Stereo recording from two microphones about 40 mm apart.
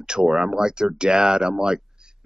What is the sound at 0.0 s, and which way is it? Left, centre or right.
Speech, centre.